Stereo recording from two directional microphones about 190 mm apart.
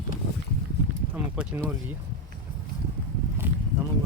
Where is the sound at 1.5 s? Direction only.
10° right (ahead or behind).